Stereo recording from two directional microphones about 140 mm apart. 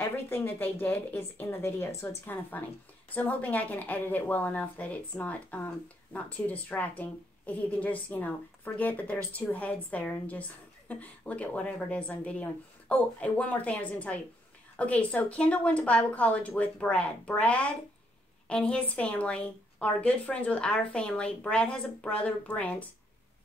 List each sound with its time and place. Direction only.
0.0 s a woman's voice: 15° left (ahead or behind)